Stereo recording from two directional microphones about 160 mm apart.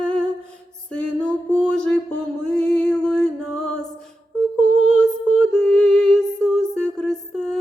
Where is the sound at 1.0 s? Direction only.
5° left (ahead or behind).